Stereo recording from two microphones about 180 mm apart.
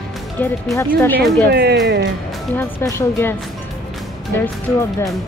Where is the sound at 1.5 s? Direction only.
65° right (ahead or behind).